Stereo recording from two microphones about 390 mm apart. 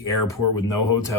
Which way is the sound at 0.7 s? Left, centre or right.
Left.